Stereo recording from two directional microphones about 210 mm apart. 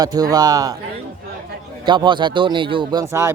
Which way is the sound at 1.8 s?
20° right (ahead or behind).